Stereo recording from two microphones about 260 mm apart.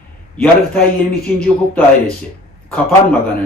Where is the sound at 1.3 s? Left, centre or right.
Centre.